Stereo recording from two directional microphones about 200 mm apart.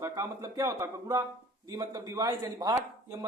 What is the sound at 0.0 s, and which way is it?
Speech, 15° right (ahead or behind).